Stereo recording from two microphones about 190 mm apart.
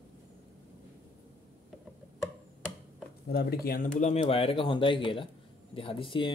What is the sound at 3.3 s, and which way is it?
Speech, 55° left (ahead or behind).